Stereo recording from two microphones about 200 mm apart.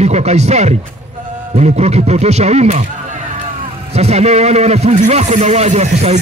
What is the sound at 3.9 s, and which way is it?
A man's voice, 30° right (ahead or behind).